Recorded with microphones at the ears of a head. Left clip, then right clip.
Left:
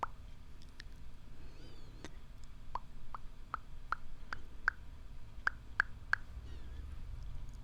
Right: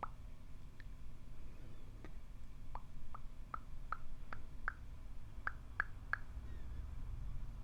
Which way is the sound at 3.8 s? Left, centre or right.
Left.